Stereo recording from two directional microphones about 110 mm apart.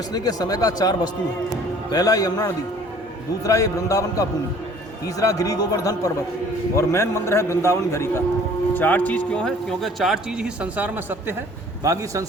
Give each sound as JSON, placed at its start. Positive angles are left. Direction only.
{"t": 0.1, "sound": "a man's voice", "side_deg": 35}
{"t": 11.8, "sound": "speech", "side_deg": -30}